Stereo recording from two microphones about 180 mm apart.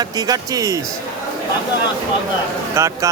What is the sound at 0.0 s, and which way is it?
Speech, 20° right (ahead or behind).